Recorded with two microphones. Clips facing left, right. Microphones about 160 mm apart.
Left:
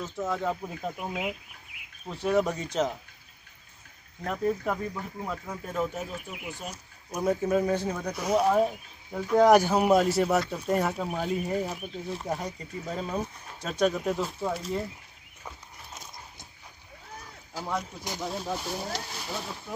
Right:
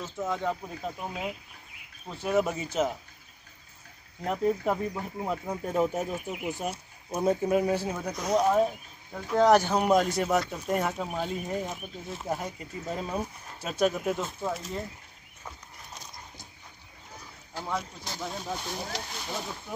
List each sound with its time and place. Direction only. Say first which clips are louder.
0.0 s speech: left 1 dB; centre (ahead or behind)
0.9 s speech: left 2 dB; 15° left (ahead or behind)
2.0 s speech: left 1 dB; 5° right (ahead or behind)
4.2 s speech: right 1 dB; 20° right (ahead or behind); by 6.0 s 35° right (ahead or behind)
6.1 s speech: right 5 dB; 25° right (ahead or behind)
7.4 s speech: even; 15° right (ahead or behind)
8.1 s speech: even; 5° left (ahead or behind)
17.6 s speech: left 1 dB; 5° left (ahead or behind)